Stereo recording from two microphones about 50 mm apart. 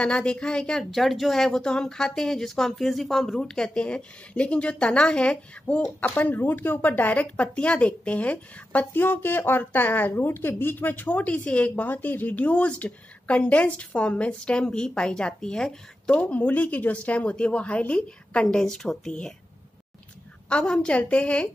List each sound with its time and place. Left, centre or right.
0.0 s a woman's voice: centre
0.9 s speech: centre; by 5.8 s left
6.0 s speech: left
8.9 s speech: left
11.9 s a woman's voice: left; by 15.8 s centre
16.1 s a woman's voice: left
18.6 s speech: centre
20.4 s a woman's voice: left